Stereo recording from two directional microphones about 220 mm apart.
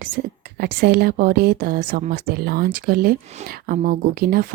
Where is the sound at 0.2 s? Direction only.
35° right (ahead or behind).